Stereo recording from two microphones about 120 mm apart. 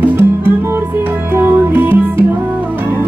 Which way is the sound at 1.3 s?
15° right (ahead or behind).